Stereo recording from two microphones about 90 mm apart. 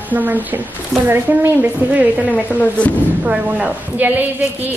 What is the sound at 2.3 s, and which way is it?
Speech, 15° left (ahead or behind).